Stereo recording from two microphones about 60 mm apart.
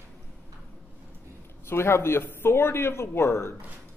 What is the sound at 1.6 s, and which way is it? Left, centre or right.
A man's voice, left.